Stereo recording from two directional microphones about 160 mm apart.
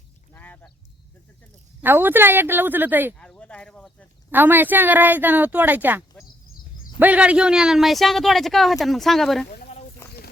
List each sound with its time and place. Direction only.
0.3 s duck: 10° left (ahead or behind)
1.8 s speech: 15° right (ahead or behind)
3.2 s a sound: 5° left (ahead or behind)
4.3 s speech: 10° right (ahead or behind)
7.0 s speech: 10° right (ahead or behind)
9.5 s a sound: 45° left (ahead or behind)